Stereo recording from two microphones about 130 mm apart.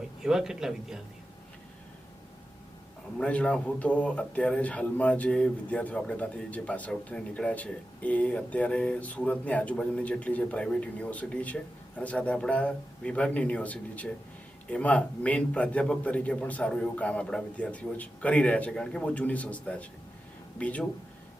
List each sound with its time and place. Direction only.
0.2 s a man's voice: 5° right (ahead or behind)
3.2 s a man's voice: 10° left (ahead or behind)